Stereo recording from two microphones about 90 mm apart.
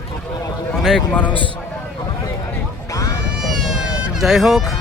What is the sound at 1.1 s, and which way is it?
Speech, 15° left (ahead or behind).